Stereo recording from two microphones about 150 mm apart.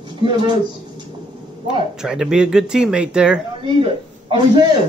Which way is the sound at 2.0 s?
5° right (ahead or behind).